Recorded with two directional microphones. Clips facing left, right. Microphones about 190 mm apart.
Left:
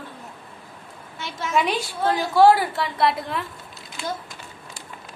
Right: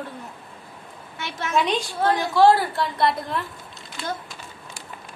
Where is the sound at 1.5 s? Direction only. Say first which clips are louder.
Even; 5° left (ahead or behind).